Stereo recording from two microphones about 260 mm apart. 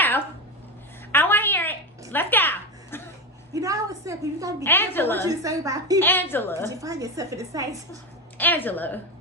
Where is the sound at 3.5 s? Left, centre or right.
Centre.